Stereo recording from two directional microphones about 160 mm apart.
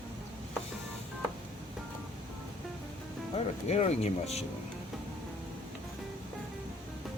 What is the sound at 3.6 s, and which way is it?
Speech, 45° left (ahead or behind).